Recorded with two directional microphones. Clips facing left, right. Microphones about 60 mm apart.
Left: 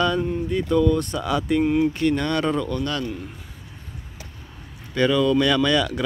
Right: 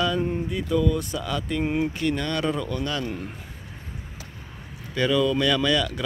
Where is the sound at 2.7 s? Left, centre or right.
Centre.